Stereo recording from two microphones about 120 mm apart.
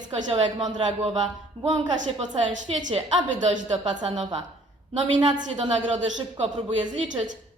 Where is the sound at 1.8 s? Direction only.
45° right (ahead or behind).